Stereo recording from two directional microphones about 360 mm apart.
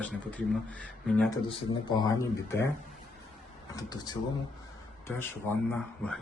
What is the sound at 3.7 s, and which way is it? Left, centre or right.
Speech, centre.